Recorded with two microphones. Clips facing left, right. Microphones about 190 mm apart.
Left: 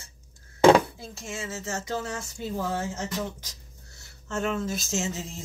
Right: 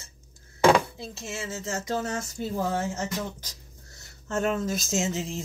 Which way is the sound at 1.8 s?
45° right (ahead or behind).